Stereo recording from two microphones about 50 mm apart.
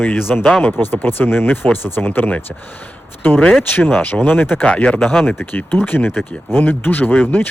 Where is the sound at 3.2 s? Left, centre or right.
Left.